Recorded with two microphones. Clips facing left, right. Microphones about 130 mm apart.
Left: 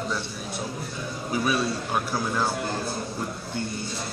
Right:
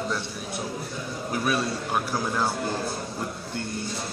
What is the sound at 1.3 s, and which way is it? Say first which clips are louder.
A man's voice: left 1 dB; centre (ahead or behind).